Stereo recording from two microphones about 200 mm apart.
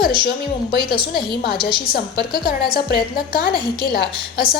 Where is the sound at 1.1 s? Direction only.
50° left (ahead or behind).